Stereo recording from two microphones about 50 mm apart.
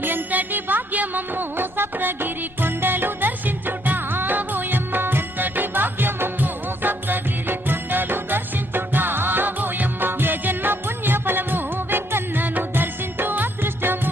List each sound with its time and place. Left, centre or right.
0.0 s music: right